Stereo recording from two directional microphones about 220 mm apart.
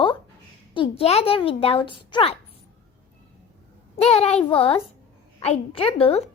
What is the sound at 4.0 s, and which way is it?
A child's voice, 25° left (ahead or behind).